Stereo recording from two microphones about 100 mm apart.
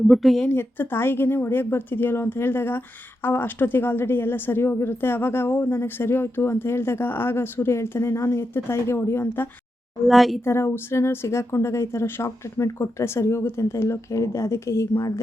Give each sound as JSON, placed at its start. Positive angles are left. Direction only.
{"t": 0.1, "sound": "speech", "side_deg": 0}
{"t": 0.4, "sound": "speech", "side_deg": 20}
{"t": 10.1, "sound": "speech", "side_deg": 0}
{"t": 10.4, "sound": "speech", "side_deg": 25}